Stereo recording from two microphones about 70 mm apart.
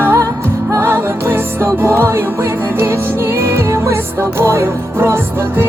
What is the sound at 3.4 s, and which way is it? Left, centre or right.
Music, right.